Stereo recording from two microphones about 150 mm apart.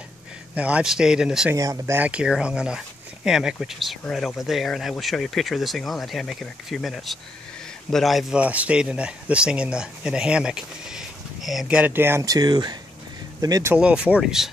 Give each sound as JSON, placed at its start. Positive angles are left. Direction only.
{"t": 0.6, "sound": "speech", "side_deg": -10}
{"t": 1.5, "sound": "speech", "side_deg": -20}
{"t": 2.0, "sound": "speech", "side_deg": -10}
{"t": 13.7, "sound": "speech", "side_deg": -5}